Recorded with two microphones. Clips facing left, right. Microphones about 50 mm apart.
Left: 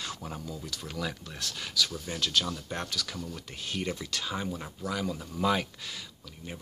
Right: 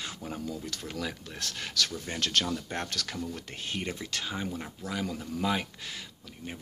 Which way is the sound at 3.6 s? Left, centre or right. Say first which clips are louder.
Left 2 dB; right.